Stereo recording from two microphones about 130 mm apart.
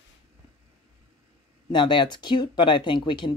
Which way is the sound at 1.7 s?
35° left (ahead or behind).